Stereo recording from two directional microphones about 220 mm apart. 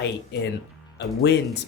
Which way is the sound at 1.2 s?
50° left (ahead or behind).